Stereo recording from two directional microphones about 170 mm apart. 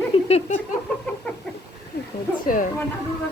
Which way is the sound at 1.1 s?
10° left (ahead or behind).